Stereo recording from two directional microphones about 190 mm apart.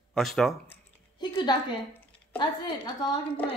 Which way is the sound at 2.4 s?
20° left (ahead or behind).